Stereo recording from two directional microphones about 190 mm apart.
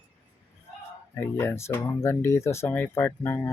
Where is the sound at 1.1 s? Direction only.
15° left (ahead or behind).